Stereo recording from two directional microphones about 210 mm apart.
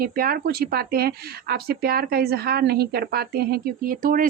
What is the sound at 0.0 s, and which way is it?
Speech, 45° right (ahead or behind).